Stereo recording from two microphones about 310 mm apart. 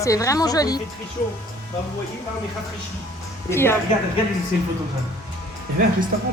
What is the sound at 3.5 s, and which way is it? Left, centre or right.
Speech, centre.